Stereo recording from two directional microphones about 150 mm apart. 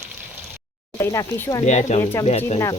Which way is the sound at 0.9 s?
20° left (ahead or behind).